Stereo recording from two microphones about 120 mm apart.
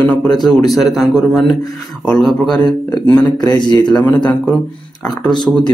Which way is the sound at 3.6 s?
40° left (ahead or behind).